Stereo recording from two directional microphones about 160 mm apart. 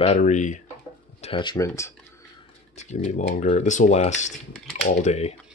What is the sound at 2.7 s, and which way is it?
Speech, 45° left (ahead or behind).